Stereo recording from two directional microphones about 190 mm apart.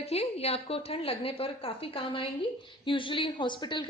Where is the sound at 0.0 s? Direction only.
35° left (ahead or behind).